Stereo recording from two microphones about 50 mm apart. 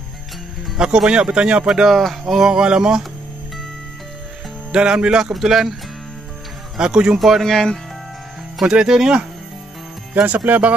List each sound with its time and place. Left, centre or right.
0.7 s speech: centre
1.7 s speech: centre
4.7 s speech: centre
5.2 s speech: centre
6.8 s speech: centre
7.2 s speech: centre
7.4 s speech: centre
8.5 s speech: centre
10.1 s speech: right